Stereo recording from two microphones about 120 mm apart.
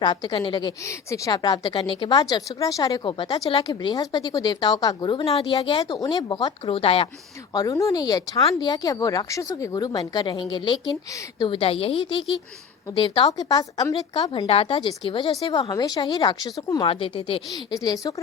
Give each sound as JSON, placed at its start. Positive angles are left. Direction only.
{"t": 0.0, "sound": "a woman's voice", "side_deg": 40}
{"t": 0.9, "sound": "speech", "side_deg": 25}
{"t": 1.3, "sound": "a woman's voice", "side_deg": 35}
{"t": 2.3, "sound": "a woman's voice", "side_deg": 30}
{"t": 5.2, "sound": "a woman's voice", "side_deg": 50}
{"t": 5.8, "sound": "a woman's voice", "side_deg": 30}
{"t": 6.7, "sound": "a woman's voice", "side_deg": 50}
{"t": 7.5, "sound": "a woman's voice", "side_deg": 30}
{"t": 13.3, "sound": "a woman's voice", "side_deg": 30}
{"t": 14.4, "sound": "a woman's voice", "side_deg": 50}
{"t": 15.7, "sound": "a woman's voice", "side_deg": 35}
{"t": 16.8, "sound": "a woman's voice", "side_deg": 50}
{"t": 17.5, "sound": "a woman's voice", "side_deg": 30}